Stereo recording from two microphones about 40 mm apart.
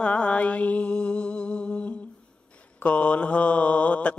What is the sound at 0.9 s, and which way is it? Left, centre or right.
Music, left.